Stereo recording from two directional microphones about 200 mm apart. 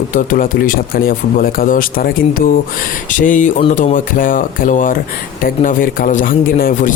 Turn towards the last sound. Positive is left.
turn(degrees=45)  # may be behind; listen again after turning